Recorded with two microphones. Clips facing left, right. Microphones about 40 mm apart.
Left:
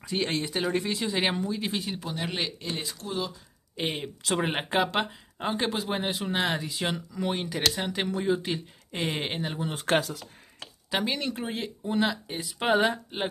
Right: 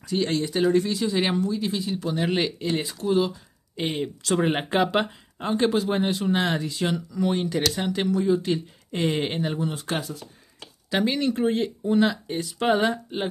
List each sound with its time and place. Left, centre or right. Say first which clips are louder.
0.0 s speech: right 4 dB; left
2.2 s speech: right 7 dB; centre
3.0 s speech: right 10 dB; right
3.7 s speech: right 4 dB; centre
8.1 s speech: right 6 dB; left
8.5 s speech: right 6 dB; centre
9.8 s speech: left 4 dB; left
10.9 s speech: right 5 dB; centre